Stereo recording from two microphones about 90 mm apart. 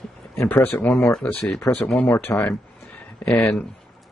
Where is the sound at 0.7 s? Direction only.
20° left (ahead or behind).